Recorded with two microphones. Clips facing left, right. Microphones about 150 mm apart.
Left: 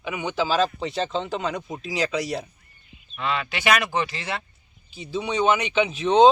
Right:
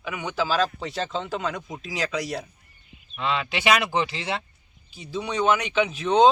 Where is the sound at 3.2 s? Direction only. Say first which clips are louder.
Even; 20° right (ahead or behind).